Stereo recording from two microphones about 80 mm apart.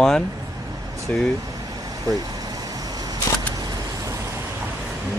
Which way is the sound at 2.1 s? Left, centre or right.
Right.